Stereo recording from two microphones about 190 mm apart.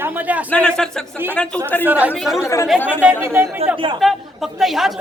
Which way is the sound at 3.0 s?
10° right (ahead or behind).